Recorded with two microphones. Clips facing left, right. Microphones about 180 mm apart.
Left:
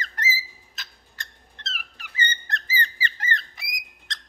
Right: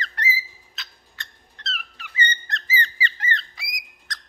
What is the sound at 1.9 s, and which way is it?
Squeak, 50° left (ahead or behind).